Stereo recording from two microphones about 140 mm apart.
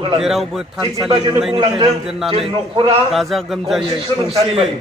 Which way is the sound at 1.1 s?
40° right (ahead or behind).